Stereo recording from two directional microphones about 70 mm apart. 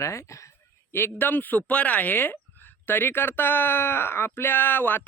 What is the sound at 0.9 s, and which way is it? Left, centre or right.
Speech, left.